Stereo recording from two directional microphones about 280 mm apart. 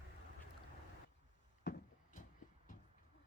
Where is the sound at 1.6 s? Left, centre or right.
Left.